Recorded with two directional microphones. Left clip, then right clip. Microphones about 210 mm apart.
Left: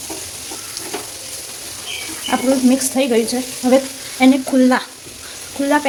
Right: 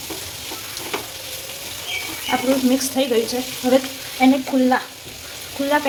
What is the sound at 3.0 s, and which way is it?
Speech, 35° left (ahead or behind).